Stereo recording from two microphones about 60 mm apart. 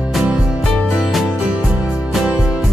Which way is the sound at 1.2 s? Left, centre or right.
Centre.